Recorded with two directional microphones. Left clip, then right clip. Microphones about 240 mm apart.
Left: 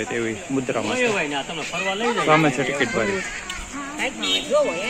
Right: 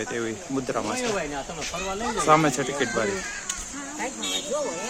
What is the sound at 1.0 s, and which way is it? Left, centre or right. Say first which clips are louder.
Speech: left 6 dB; right.